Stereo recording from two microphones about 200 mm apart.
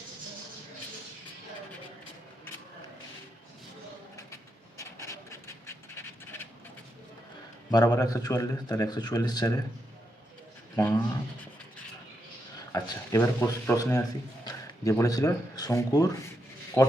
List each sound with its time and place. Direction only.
4.8 s a sound: 15° left (ahead or behind)
7.7 s a man's voice: 20° left (ahead or behind)
10.8 s speech: 15° left (ahead or behind)
12.7 s speech: 15° left (ahead or behind)